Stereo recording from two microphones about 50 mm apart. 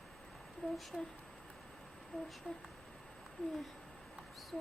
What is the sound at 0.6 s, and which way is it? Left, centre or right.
Speech, left.